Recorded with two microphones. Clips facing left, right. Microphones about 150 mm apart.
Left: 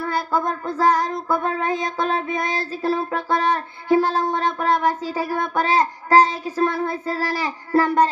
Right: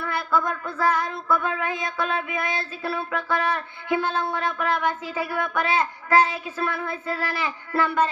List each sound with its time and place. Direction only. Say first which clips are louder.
0.0 s child singing: left 2 dB; 35° left (ahead or behind)